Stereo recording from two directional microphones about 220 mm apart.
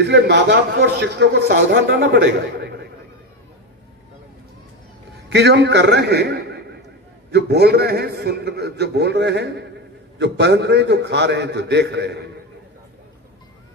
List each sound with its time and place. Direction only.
0.0 s a man's voice: 50° right (ahead or behind)
5.3 s a man's voice: 50° right (ahead or behind)